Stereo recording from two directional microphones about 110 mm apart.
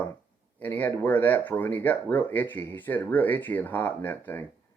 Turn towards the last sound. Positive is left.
turn(degrees=15)  # may be behind; listen again after turning